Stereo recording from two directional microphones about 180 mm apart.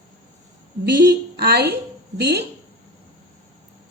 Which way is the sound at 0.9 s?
60° right (ahead or behind).